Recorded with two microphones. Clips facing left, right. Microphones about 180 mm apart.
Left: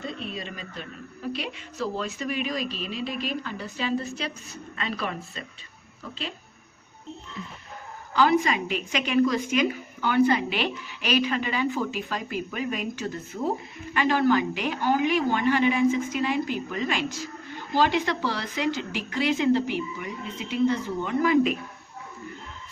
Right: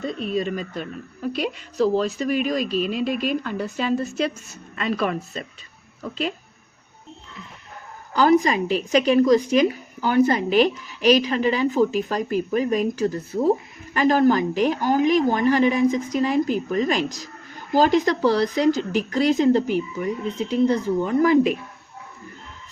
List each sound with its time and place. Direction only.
0.2 s speech: 45° right (ahead or behind)
8.1 s speech: 40° right (ahead or behind)